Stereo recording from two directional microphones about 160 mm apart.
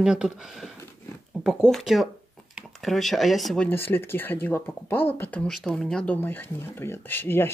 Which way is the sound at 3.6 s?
15° left (ahead or behind).